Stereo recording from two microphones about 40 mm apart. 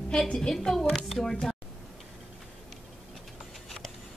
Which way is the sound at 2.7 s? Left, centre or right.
Centre.